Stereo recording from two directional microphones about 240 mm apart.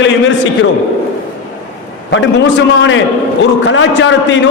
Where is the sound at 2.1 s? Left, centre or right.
Left.